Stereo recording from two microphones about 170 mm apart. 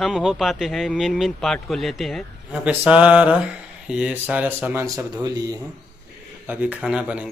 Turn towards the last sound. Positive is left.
turn(degrees=-5)  # may be behind; listen again after turning